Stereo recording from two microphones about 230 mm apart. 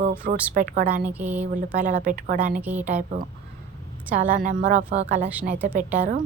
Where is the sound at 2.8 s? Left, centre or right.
Right.